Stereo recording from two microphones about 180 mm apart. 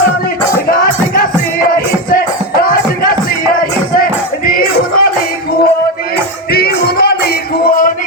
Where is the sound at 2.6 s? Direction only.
55° left (ahead or behind).